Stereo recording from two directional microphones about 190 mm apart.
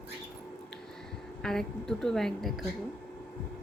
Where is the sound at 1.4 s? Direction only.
5° left (ahead or behind).